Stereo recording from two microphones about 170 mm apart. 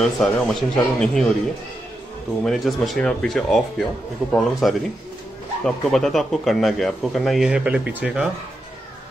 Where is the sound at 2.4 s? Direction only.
Centre (ahead or behind).